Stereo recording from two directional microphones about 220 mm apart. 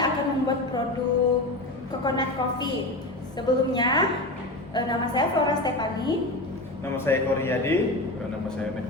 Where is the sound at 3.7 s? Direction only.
20° left (ahead or behind).